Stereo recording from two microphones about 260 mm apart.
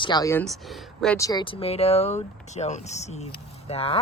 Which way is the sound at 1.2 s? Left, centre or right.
Centre.